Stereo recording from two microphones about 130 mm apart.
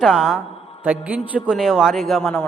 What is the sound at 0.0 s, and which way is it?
A man's voice, centre (ahead or behind).